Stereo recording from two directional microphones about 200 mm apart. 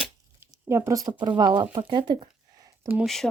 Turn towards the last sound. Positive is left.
turn(degrees=0)  # may be behind; listen again after turning